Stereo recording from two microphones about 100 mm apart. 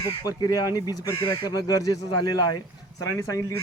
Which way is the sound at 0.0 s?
40° left (ahead or behind).